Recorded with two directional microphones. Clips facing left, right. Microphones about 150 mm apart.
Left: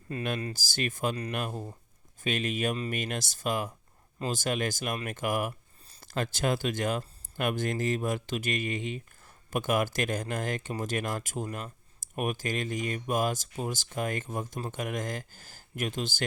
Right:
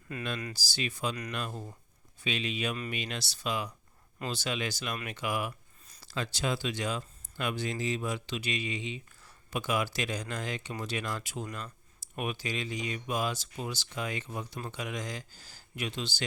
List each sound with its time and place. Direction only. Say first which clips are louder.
0.1 s speech: left 4 dB; 30° left (ahead or behind)
0.5 s speech: left 3 dB; 50° left (ahead or behind)